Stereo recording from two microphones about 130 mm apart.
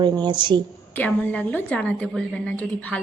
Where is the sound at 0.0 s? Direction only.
35° right (ahead or behind).